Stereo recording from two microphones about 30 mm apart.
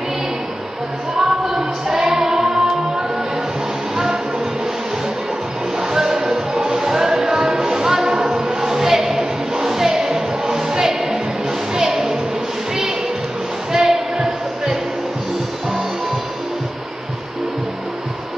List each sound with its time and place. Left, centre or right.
1.1 s music: centre
3.9 s music: centre
5.8 s music: centre
13.7 s basketball bounce: right